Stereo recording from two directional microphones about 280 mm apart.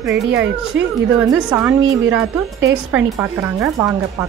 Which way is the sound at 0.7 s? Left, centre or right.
Right.